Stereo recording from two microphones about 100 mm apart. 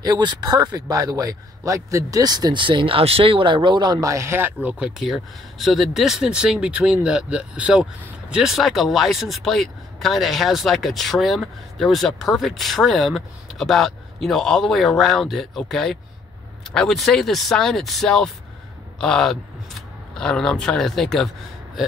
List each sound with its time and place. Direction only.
0.0 s a man's voice: 45° right (ahead or behind)
4.0 s speech: 30° right (ahead or behind); by 21.3 s 5° left (ahead or behind)